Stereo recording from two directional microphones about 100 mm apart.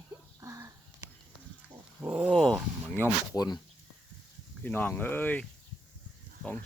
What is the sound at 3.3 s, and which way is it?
Speech, 40° left (ahead or behind).